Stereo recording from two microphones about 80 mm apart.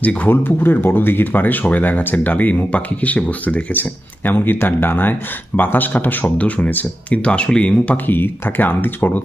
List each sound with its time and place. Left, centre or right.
0.0 s speech: centre